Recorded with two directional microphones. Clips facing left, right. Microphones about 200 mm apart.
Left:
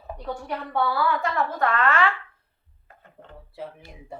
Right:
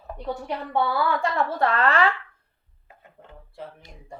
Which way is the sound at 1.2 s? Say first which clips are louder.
Right 1 dB; 30° right (ahead or behind).